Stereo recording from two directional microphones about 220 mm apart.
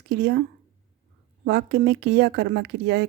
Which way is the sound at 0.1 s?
50° right (ahead or behind).